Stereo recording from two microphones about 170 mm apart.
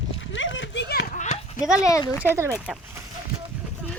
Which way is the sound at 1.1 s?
45° left (ahead or behind).